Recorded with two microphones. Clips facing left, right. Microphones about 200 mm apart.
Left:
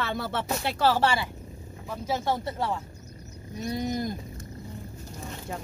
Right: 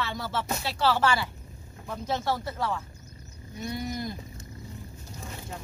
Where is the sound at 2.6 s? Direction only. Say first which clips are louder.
Left 1 dB; 30° left (ahead or behind).